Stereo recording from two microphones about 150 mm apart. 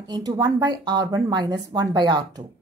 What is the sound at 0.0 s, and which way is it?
Speech, 25° right (ahead or behind).